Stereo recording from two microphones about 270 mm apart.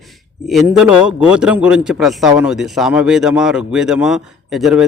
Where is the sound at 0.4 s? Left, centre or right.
Centre.